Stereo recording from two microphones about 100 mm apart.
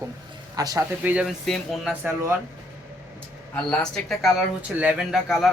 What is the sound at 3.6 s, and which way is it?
Speech, 10° left (ahead or behind).